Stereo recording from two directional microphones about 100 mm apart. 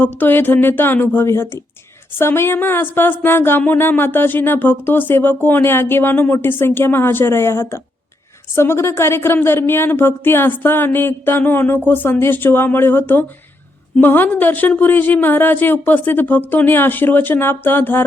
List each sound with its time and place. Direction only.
0.2 s speech: 20° left (ahead or behind)